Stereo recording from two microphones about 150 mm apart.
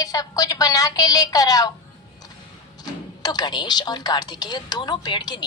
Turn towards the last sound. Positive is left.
turn(degrees=30)  # may be behind; listen again after turning